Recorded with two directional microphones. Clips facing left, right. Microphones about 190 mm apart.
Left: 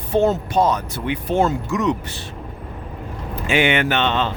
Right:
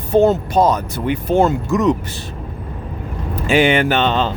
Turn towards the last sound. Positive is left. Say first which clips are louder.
# right 3 dB
turn(degrees=-35)  # may be behind; listen again after turning